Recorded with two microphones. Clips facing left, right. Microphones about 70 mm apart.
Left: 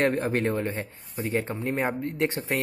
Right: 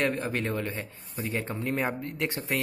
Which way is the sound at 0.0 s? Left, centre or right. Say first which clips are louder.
Left 4 dB; left.